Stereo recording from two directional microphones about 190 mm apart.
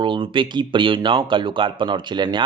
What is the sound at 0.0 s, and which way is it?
Speech, 25° right (ahead or behind).